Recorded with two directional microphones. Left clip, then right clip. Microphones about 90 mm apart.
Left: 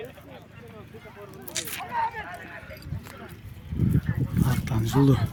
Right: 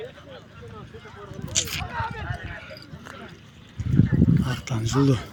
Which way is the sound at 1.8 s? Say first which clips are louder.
Left 2 dB; 5° left (ahead or behind).